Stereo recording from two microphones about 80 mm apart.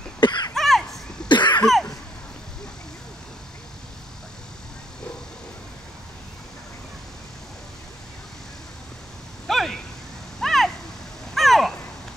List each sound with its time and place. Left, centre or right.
0.2 s cough: left
0.6 s a sound: centre
1.3 s cough: left
9.5 s a sound: centre
10.4 s vehicle: centre
11.3 s crow: centre